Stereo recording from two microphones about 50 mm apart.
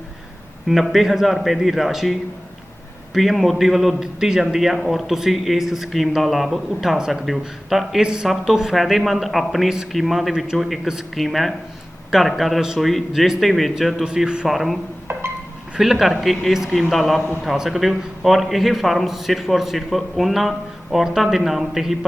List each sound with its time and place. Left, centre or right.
0.7 s a man's voice: centre
8.0 s a man's voice: centre
10.4 s speech: centre
11.1 s a man's voice: centre
14.0 s speech: centre
14.4 s a man's voice: centre
15.8 s a man's voice: centre